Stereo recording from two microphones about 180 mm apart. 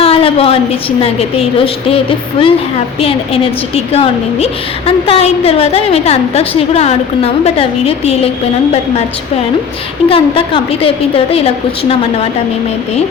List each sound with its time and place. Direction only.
0.0 s a woman's voice: 30° left (ahead or behind)
10.1 s a woman's voice: 30° left (ahead or behind)